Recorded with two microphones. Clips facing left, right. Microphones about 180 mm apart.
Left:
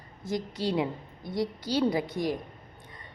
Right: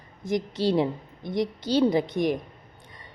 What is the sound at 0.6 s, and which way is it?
A woman's voice, 30° right (ahead or behind).